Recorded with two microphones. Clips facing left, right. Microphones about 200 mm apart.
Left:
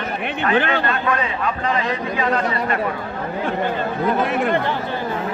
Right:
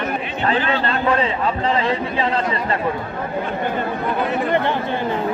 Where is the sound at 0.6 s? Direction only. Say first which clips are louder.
Left 4 dB; 60° left (ahead or behind).